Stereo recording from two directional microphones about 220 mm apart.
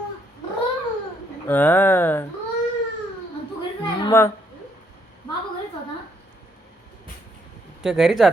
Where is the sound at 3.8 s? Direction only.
15° left (ahead or behind).